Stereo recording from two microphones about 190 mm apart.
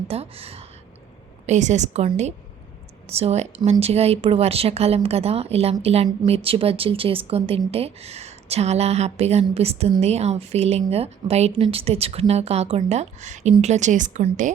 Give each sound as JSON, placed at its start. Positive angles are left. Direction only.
{"t": 0.1, "sound": "a woman's voice", "side_deg": -30}